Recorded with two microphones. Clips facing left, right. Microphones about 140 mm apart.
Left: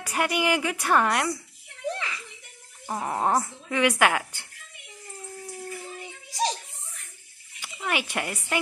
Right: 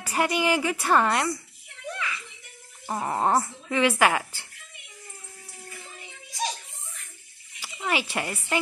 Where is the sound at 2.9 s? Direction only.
Centre (ahead or behind).